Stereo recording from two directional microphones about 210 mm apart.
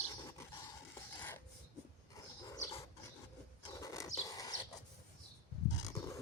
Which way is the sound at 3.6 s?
15° left (ahead or behind).